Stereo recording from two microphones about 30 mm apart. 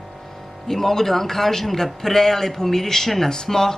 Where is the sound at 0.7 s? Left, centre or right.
Centre.